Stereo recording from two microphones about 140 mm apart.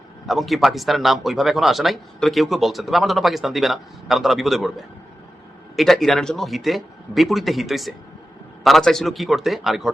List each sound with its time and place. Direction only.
0.3 s speech: centre (ahead or behind)
5.7 s speech: centre (ahead or behind)